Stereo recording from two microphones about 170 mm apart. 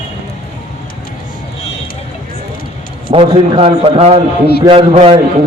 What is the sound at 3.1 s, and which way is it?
A man's voice, 30° right (ahead or behind).